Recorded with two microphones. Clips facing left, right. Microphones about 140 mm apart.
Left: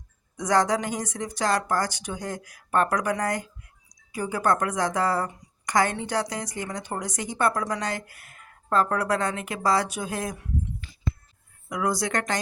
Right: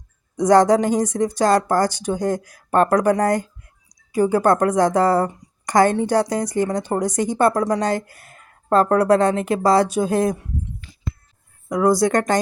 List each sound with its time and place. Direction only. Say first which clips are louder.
0.3 s a woman's voice: right 9 dB; 35° right (ahead or behind)
11.7 s a woman's voice: right 10 dB; 35° right (ahead or behind)